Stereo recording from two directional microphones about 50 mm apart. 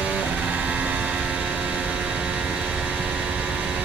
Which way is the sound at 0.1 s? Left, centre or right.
Right.